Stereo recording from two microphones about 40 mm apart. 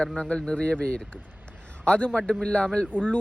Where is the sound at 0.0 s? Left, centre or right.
Left.